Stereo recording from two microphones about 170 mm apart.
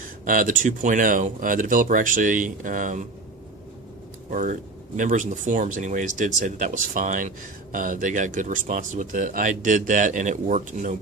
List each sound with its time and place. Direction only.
0.3 s speech: 50° right (ahead or behind)
4.3 s speech: 50° right (ahead or behind)